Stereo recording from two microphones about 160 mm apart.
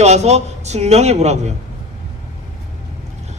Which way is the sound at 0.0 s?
45° right (ahead or behind).